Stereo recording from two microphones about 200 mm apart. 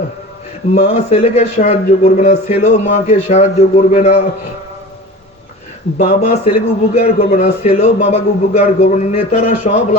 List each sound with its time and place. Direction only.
0.7 s a man's voice: 35° left (ahead or behind)
6.0 s a man's voice: 35° left (ahead or behind)